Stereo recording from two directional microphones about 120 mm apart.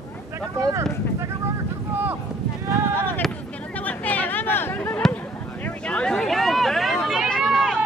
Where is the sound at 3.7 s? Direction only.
15° left (ahead or behind).